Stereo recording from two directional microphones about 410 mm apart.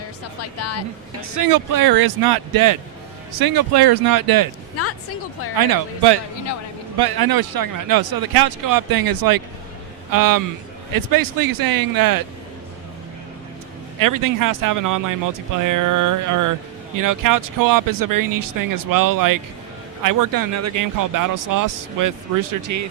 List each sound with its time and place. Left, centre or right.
0.6 s speech: left
1.5 s speech: right
4.8 s speech: left
5.5 s speech: right
14.0 s speech: right